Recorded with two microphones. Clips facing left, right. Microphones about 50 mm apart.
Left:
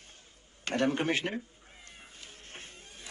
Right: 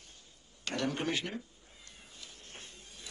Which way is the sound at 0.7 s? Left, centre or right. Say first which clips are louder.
Left 5 dB; left.